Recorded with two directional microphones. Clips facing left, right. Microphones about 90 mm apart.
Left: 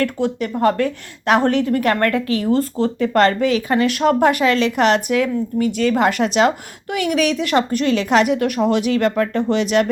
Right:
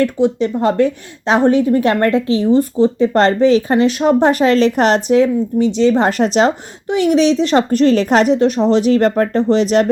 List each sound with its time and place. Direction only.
0.0 s a woman's voice: 20° right (ahead or behind)
3.2 s a woman's voice: 30° right (ahead or behind)
4.3 s a woman's voice: 35° right (ahead or behind)